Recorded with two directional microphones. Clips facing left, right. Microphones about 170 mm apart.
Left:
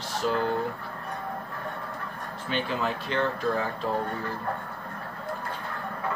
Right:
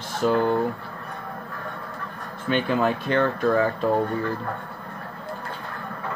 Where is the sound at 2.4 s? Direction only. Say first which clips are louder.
Right 7 dB; 55° right (ahead or behind).